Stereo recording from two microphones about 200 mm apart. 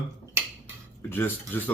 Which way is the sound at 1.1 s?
10° left (ahead or behind).